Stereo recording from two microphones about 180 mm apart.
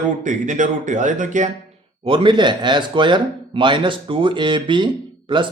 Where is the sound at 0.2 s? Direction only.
45° right (ahead or behind).